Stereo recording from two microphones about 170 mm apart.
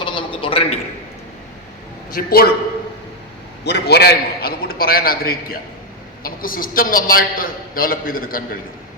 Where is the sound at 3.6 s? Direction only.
75° left (ahead or behind); by 8.6 s 60° left (ahead or behind).